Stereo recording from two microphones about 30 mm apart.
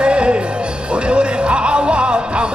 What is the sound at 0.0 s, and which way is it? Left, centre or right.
Music, right.